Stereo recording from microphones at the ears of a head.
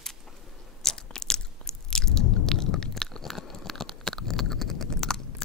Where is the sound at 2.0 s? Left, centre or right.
Left.